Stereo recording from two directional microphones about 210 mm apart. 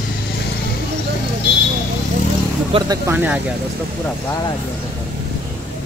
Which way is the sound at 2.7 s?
25° right (ahead or behind).